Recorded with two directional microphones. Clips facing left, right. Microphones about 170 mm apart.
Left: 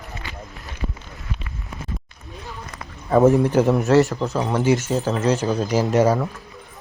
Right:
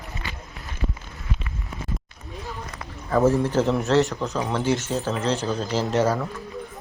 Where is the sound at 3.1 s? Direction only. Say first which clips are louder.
Left 5 dB; 20° left (ahead or behind).